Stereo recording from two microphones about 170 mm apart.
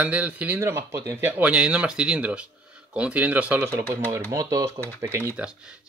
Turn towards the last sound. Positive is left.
turn(degrees=-5)  # may be behind; listen again after turning